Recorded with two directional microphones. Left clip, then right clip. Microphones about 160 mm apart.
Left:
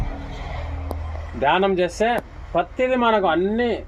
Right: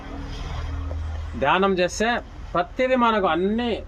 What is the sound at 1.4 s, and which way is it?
Speech, 45° right (ahead or behind).